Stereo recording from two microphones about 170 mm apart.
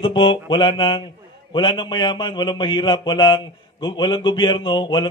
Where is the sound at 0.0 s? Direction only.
30° left (ahead or behind).